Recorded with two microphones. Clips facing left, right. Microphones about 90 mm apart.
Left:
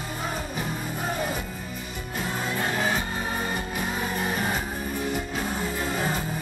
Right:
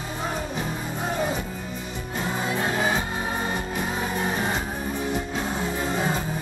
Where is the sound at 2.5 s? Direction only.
10° right (ahead or behind).